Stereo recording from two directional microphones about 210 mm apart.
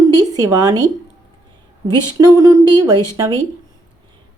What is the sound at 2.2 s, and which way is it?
Speech, 15° right (ahead or behind).